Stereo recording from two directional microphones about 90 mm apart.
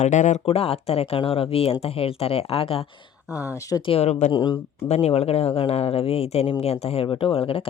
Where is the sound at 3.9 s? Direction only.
65° left (ahead or behind).